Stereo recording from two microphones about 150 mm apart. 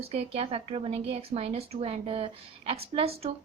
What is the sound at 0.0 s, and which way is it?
A woman's voice, 45° right (ahead or behind).